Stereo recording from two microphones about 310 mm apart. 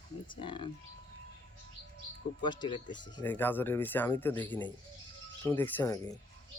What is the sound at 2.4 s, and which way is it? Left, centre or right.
Speech, centre.